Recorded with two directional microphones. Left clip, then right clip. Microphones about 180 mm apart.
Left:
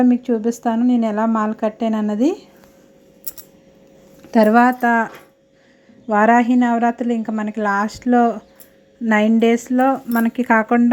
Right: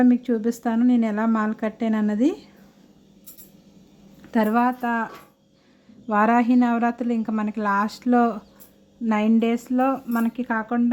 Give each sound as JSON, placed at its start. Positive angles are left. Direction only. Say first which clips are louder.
{"t": 0.0, "sound": "speech", "louder": "left 3 dB", "side_deg": 0}
{"t": 4.3, "sound": "speech", "louder": "left 8 dB", "side_deg": 20}
{"t": 6.1, "sound": "speech", "louder": "left 5 dB", "side_deg": 5}
{"t": 9.0, "sound": "speech", "louder": "left 7 dB", "side_deg": 15}